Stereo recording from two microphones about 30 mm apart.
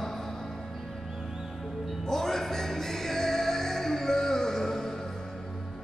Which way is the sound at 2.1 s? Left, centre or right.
Centre.